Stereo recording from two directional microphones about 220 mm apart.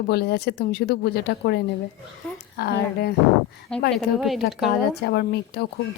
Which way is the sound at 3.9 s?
Centre (ahead or behind).